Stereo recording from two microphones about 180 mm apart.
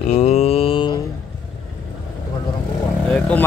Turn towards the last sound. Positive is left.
turn(degrees=5)  # may be behind; listen again after turning